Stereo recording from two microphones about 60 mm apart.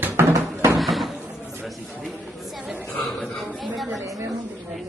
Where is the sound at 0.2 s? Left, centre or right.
Right.